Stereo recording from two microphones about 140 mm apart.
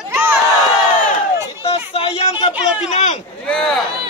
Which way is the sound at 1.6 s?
40° left (ahead or behind).